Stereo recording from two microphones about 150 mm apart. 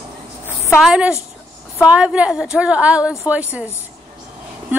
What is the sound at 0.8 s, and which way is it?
Music, 5° right (ahead or behind).